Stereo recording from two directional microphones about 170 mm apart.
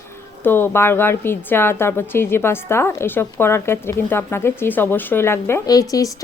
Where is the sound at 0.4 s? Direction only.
10° left (ahead or behind).